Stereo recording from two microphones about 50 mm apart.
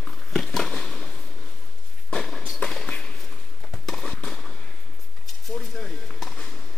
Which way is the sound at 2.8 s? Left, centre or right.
Centre.